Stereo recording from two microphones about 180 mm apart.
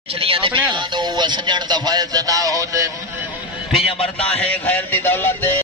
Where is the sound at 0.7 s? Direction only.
25° right (ahead or behind).